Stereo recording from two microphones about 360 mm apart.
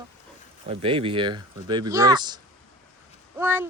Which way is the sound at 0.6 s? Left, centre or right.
Centre.